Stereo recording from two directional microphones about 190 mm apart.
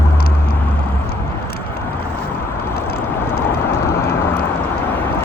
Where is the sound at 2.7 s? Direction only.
55° left (ahead or behind).